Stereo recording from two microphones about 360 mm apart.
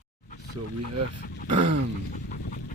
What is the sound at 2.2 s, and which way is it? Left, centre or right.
Dog, left.